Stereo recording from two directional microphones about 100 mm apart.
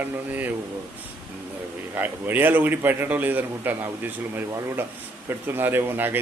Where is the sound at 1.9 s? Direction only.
20° right (ahead or behind).